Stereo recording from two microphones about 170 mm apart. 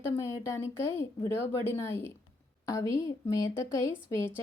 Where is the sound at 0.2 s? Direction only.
20° left (ahead or behind).